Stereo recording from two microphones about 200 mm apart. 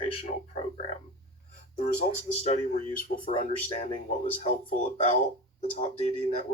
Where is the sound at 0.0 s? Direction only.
30° left (ahead or behind).